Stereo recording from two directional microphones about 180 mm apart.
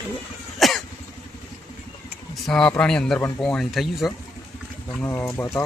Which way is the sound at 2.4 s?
5° left (ahead or behind).